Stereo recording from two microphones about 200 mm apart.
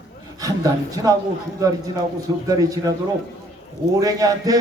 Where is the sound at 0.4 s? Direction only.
15° right (ahead or behind).